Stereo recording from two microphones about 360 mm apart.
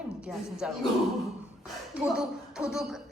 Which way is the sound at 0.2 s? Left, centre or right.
Centre.